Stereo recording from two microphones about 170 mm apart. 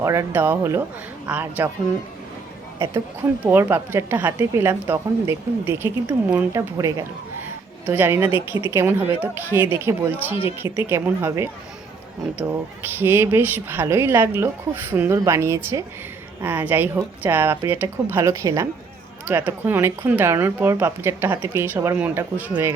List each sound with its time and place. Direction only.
0.0 s a woman's voice: 15° right (ahead or behind)
3.4 s a woman's voice: 15° right (ahead or behind)
8.3 s speech: 30° left (ahead or behind)
8.7 s a woman's voice: 15° right (ahead or behind)